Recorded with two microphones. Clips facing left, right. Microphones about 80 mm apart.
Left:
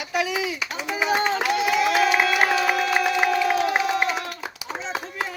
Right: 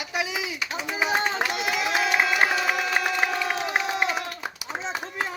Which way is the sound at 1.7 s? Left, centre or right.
Centre.